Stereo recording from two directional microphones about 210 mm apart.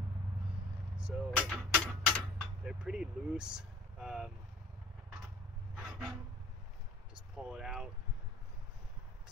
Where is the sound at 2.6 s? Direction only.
5° right (ahead or behind).